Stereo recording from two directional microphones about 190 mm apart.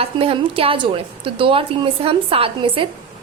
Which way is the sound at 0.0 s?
30° right (ahead or behind).